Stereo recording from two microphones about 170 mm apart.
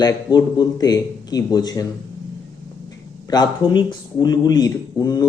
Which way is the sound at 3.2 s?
25° left (ahead or behind).